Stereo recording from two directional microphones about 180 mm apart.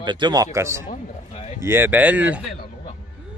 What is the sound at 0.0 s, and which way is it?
Speech, 25° right (ahead or behind).